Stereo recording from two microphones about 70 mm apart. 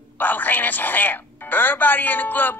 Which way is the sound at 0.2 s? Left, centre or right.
Left.